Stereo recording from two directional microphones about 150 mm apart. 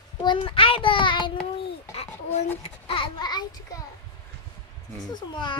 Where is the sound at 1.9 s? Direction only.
45° left (ahead or behind).